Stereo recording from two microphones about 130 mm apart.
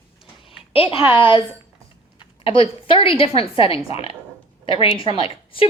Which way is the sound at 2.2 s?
45° left (ahead or behind).